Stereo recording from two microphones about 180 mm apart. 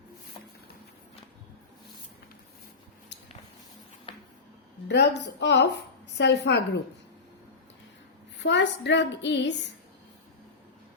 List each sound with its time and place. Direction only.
4.1 s a sound: 30° left (ahead or behind)
4.9 s a woman's voice: 70° left (ahead or behind)
8.4 s a woman's voice: 80° left